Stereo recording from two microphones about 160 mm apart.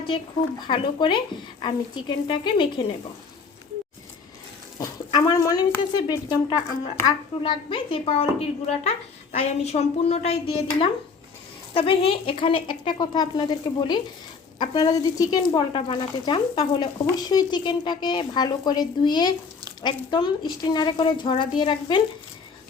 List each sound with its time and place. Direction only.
0.6 s a woman's voice: 30° left (ahead or behind)
4.8 s a woman's voice: 20° left (ahead or behind)